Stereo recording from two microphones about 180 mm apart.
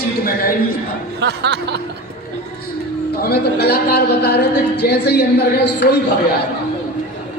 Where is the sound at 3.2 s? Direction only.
65° left (ahead or behind).